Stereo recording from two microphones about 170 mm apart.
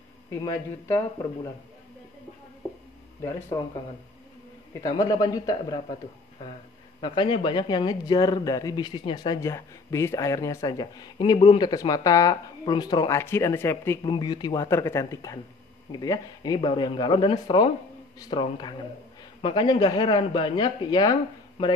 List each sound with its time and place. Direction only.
0.3 s a man's voice: 15° left (ahead or behind)
4.8 s speech: 20° left (ahead or behind)
7.0 s speech: 25° left (ahead or behind)
14.0 s speech: 25° left (ahead or behind)